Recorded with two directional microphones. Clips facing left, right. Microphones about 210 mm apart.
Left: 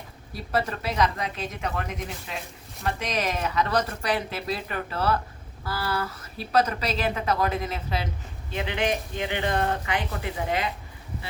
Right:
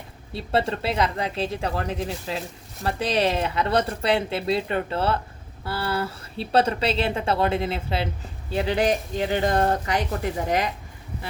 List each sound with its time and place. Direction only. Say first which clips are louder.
0.3 s speech: right 4 dB; 25° right (ahead or behind); by 10.7 s 45° right (ahead or behind)